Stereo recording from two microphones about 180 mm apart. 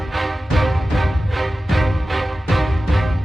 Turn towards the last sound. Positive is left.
turn(degrees=0)  # may be behind; listen again after turning